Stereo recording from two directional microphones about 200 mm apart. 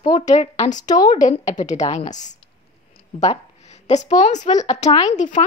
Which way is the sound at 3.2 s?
35° left (ahead or behind).